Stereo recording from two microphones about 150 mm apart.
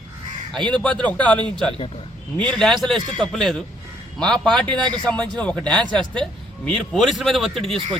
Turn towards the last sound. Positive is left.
turn(degrees=0)  # may be behind; listen again after turning